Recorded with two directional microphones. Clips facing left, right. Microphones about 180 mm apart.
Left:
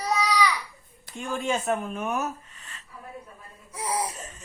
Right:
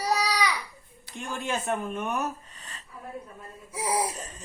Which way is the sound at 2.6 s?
35° right (ahead or behind).